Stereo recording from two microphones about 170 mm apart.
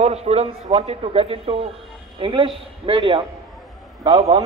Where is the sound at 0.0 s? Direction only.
40° right (ahead or behind).